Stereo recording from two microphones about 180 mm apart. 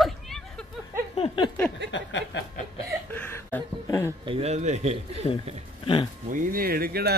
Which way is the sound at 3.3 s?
15° left (ahead or behind).